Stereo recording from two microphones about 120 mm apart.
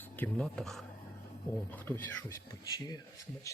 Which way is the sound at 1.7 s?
15° left (ahead or behind).